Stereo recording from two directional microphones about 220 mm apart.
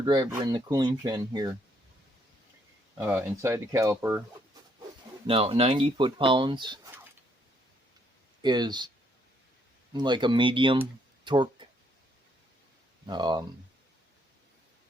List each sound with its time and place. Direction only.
0.0 s speech: 20° right (ahead or behind)
3.0 s speech: 10° right (ahead or behind)
5.2 s speech: 25° right (ahead or behind)
8.4 s speech: 20° right (ahead or behind)
9.9 s speech: 20° right (ahead or behind)
13.1 s speech: 20° right (ahead or behind)